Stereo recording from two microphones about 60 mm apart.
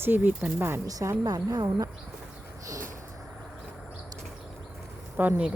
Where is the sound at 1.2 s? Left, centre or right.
Right.